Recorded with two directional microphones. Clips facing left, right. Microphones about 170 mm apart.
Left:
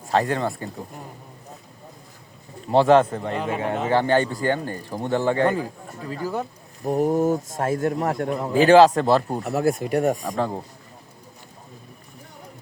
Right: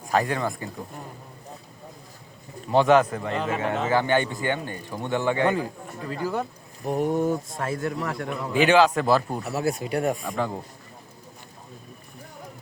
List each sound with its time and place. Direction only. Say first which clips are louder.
0.1 s speech: left 2 dB; 30° left (ahead or behind)
2.6 s speech: left 2 dB; 30° left (ahead or behind)
3.3 s speech: even; 5° left (ahead or behind)
3.8 s speech: left 3 dB; 35° left (ahead or behind)
6.8 s speech: left 3 dB; 40° left (ahead or behind)
9.4 s speech: left 4 dB; 50° left (ahead or behind); by 10.6 s 35° left (ahead or behind)